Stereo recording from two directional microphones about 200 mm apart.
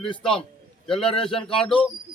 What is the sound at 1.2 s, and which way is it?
Speech, 5° left (ahead or behind).